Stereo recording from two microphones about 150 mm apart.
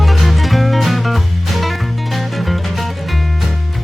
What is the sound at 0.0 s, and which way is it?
Music, centre (ahead or behind).